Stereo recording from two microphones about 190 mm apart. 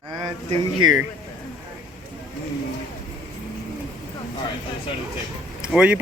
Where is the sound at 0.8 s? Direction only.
90° right.